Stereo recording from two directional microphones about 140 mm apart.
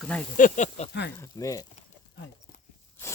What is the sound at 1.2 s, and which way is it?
Speech, 25° left (ahead or behind).